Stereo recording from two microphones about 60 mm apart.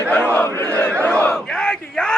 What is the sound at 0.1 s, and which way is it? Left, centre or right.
Battle cry, left.